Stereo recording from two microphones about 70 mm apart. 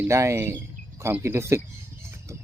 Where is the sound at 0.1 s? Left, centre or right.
Right.